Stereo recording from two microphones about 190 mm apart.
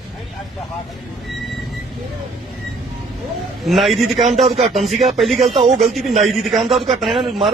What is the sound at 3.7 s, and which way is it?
Speech, centre (ahead or behind).